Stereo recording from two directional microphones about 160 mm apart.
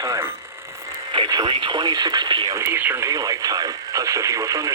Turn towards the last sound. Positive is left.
turn(degrees=-20)  # may be behind; listen again after turning